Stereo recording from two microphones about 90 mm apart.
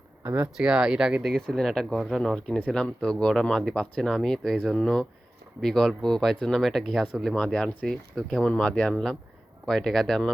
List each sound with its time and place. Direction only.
0.2 s speech: 25° right (ahead or behind)
0.5 s speech: 10° right (ahead or behind)
1.3 s speech: 5° left (ahead or behind)